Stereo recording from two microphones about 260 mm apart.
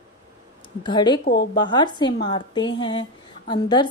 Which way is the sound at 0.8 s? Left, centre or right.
Centre.